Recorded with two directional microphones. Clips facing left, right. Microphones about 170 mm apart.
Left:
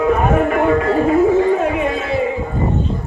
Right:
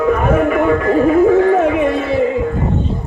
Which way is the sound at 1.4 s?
60° right (ahead or behind).